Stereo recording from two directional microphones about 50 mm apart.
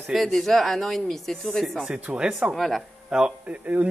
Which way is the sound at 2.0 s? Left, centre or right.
Right.